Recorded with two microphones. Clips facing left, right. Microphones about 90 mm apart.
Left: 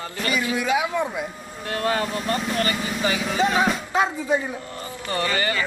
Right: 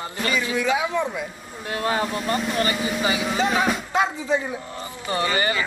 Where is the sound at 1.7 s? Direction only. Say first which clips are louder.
Even; 20° right (ahead or behind).